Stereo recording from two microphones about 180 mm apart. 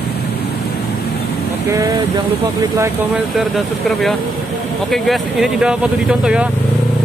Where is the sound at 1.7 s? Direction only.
20° right (ahead or behind).